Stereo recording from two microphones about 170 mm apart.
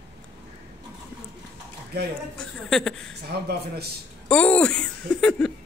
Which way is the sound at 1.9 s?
70° right (ahead or behind).